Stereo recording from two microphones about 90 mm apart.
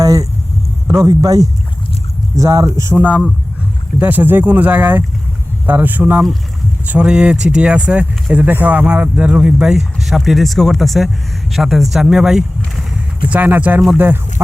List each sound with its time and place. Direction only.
0.0 s a sound: 40° right (ahead or behind)
0.9 s speech: 40° right (ahead or behind)
4.0 s speech: 20° right (ahead or behind)
13.2 s speech: 20° right (ahead or behind)